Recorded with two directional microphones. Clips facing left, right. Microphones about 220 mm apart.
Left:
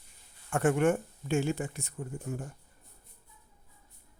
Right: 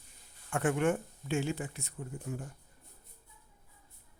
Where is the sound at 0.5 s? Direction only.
45° left (ahead or behind).